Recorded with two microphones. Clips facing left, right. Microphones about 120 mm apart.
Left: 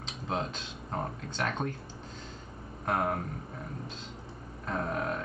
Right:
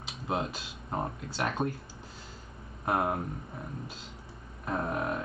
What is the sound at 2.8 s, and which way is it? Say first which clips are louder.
Speech: right 1 dB; 10° right (ahead or behind).